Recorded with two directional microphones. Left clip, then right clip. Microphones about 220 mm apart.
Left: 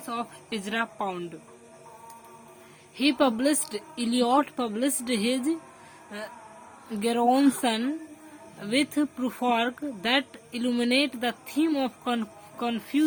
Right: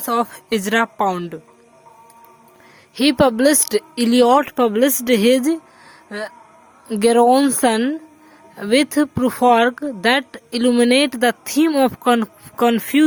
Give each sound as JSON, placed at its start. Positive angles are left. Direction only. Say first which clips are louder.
{"t": 0.0, "sound": "speech", "louder": "right 14 dB", "side_deg": -50}
{"t": 2.9, "sound": "speech", "louder": "right 9 dB", "side_deg": -50}